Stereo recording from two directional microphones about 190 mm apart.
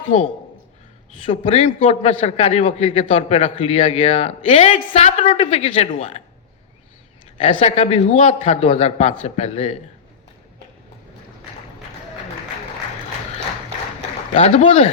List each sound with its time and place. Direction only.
1.2 s a man's voice: 30° left (ahead or behind)
7.6 s a man's voice: 35° left (ahead or behind)
14.3 s a man's voice: 35° left (ahead or behind)